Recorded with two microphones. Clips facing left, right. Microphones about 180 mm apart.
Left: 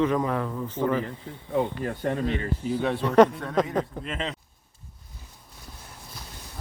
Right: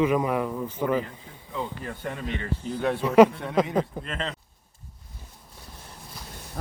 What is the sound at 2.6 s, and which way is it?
Speech, centre (ahead or behind).